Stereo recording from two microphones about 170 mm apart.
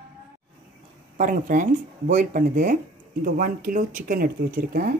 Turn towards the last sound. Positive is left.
turn(degrees=-55)  # may be behind; listen again after turning